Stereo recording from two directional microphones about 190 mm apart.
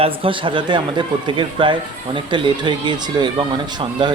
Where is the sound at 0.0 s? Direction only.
30° right (ahead or behind).